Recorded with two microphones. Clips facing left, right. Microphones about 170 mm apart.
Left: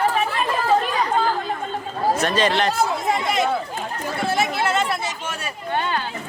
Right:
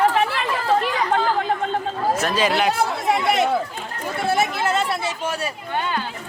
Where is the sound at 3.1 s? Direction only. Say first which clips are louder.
Right 2 dB; 70° right (ahead or behind).